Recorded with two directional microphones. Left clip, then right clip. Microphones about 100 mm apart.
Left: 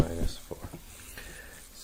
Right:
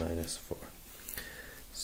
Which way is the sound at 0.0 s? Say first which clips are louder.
Left 4 dB; 30° right (ahead or behind).